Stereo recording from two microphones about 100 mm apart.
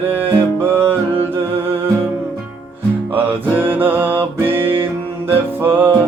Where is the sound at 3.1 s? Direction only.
20° right (ahead or behind).